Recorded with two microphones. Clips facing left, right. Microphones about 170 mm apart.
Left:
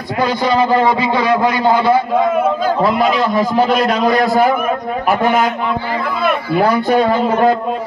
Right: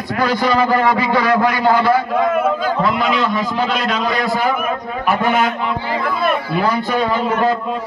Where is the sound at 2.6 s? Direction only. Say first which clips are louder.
Left 4 dB; 35° left (ahead or behind).